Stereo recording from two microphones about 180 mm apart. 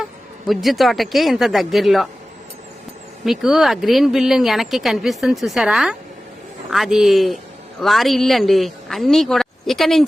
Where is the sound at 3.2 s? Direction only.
Centre (ahead or behind).